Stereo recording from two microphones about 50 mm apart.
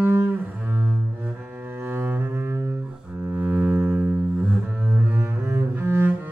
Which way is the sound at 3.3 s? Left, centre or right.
Right.